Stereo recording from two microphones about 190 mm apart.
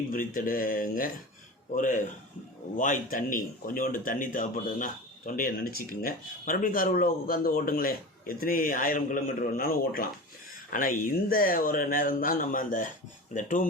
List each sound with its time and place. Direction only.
0.3 s a man's voice: 45° left (ahead or behind)